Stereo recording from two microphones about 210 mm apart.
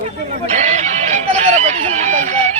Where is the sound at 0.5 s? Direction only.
35° right (ahead or behind).